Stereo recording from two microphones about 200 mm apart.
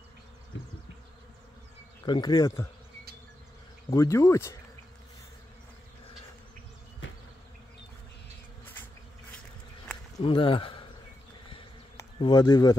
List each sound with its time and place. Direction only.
2.0 s speech: 20° left (ahead or behind)
3.9 s speech: 15° left (ahead or behind)
10.1 s speech: 25° left (ahead or behind)
12.2 s speech: 20° left (ahead or behind)